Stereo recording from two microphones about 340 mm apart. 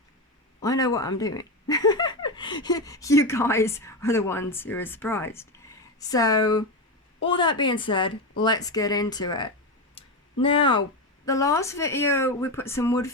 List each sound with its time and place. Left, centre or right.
0.6 s speech: centre
10.0 s a sound: centre
10.4 s speech: centre